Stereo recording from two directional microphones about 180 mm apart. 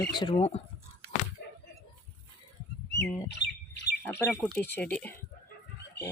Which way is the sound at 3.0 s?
15° left (ahead or behind).